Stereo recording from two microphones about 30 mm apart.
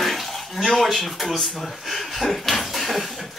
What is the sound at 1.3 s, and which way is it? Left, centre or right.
Speech, centre.